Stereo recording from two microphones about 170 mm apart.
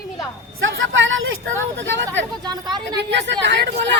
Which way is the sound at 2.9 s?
90° right.